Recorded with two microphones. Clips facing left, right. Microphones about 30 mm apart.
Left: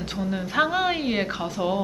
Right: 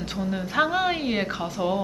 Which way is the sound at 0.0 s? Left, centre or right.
Centre.